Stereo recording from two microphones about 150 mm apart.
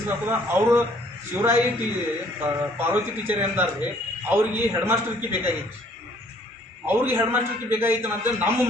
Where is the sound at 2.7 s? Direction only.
10° right (ahead or behind).